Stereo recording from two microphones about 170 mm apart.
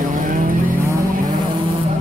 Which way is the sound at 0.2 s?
55° right (ahead or behind).